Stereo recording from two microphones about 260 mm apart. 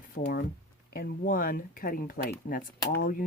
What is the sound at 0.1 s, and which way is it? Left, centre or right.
Speech, left.